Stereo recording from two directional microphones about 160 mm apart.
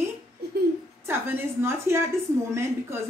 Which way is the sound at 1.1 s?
15° right (ahead or behind).